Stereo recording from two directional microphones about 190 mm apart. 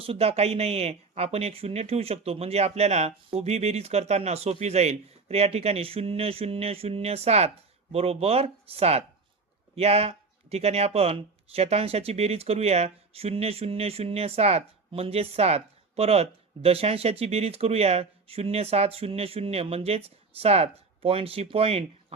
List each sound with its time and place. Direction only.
0.0 s speech: 30° right (ahead or behind)